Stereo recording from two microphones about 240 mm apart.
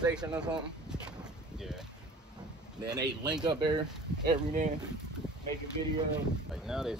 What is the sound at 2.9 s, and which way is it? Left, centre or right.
Speech, centre.